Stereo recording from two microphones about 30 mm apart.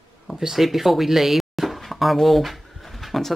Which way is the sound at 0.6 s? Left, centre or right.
Centre.